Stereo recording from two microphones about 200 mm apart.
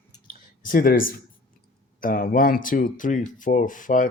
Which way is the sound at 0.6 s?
45° left (ahead or behind).